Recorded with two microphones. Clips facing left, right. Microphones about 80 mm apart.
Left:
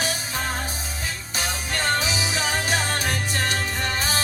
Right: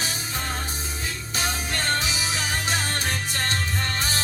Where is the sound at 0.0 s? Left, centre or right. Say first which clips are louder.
Left 4 dB; left.